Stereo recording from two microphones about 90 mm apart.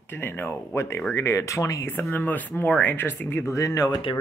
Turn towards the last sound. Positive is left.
turn(degrees=75)  # may be behind; listen again after turning